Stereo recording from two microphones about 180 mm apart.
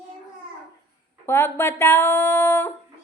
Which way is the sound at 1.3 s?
15° left (ahead or behind).